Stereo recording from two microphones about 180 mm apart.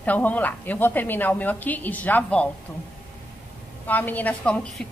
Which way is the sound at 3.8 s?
10° left (ahead or behind).